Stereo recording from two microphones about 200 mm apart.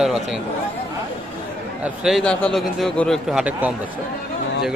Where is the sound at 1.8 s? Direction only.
5° right (ahead or behind).